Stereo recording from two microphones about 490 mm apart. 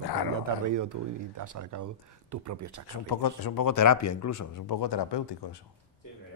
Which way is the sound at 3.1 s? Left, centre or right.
Left.